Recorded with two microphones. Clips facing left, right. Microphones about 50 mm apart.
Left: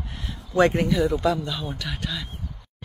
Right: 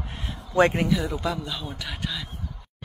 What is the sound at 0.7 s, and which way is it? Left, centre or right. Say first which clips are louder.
A man's voice: left 3 dB; centre.